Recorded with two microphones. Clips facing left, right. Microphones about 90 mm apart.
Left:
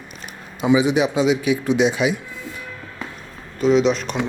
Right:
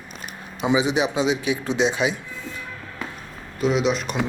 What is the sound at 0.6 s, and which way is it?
Speech, 20° right (ahead or behind).